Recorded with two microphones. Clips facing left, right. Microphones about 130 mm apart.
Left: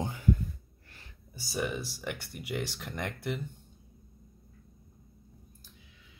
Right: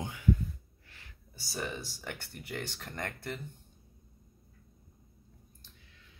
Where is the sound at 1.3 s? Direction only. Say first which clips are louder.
Left 5 dB; 10° left (ahead or behind).